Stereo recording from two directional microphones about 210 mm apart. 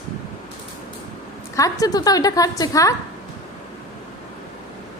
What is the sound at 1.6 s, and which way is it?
A woman's voice, 15° left (ahead or behind).